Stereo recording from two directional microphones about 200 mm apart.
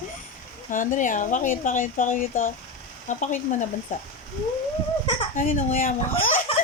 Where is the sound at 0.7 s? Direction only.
40° left (ahead or behind).